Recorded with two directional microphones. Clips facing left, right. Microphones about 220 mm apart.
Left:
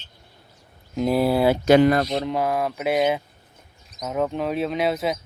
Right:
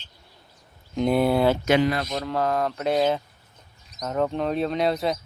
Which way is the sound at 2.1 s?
15° left (ahead or behind).